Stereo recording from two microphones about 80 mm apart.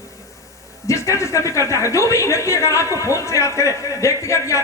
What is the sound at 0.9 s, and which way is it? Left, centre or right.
Speech, left.